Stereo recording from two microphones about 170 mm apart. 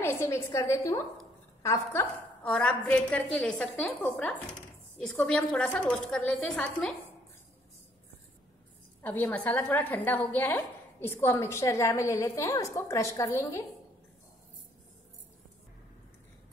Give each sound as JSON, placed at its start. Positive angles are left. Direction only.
{"t": 0.0, "sound": "a woman's voice", "side_deg": 15}
{"t": 9.0, "sound": "a woman's voice", "side_deg": 10}